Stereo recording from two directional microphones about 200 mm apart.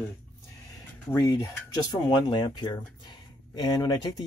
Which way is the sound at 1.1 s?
15° left (ahead or behind).